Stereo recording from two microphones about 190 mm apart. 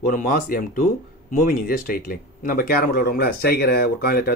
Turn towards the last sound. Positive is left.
turn(degrees=50)  # may be behind; listen again after turning